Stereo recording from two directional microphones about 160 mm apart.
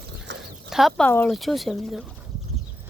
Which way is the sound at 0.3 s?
90° right.